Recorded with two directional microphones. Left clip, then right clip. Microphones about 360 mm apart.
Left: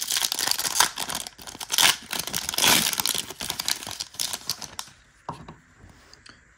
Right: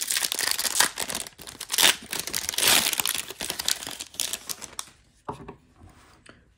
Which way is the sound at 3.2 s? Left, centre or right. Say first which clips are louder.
Even; centre.